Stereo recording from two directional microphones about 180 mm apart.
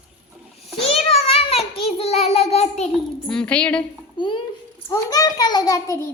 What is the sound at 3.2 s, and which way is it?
Speech, 5° left (ahead or behind).